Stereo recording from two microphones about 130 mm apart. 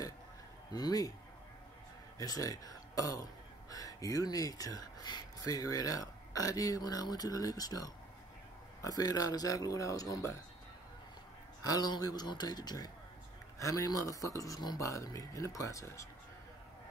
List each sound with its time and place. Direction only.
0.7 s speech: 30° left (ahead or behind)
2.1 s speech: 25° left (ahead or behind)
11.6 s a man's voice: 30° left (ahead or behind)